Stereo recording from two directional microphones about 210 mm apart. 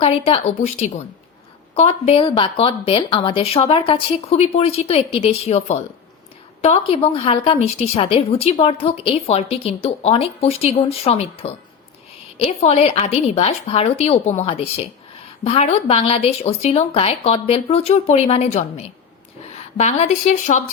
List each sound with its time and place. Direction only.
0.0 s a woman's voice: 25° left (ahead or behind)